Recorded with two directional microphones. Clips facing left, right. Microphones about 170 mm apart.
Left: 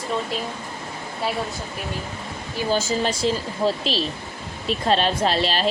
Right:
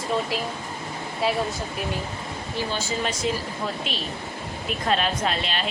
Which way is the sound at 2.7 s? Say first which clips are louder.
Left 9 dB; 40° left (ahead or behind).